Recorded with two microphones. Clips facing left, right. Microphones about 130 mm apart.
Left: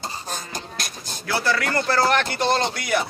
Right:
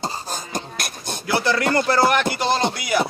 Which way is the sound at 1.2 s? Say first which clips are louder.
Right 3 dB; 20° right (ahead or behind).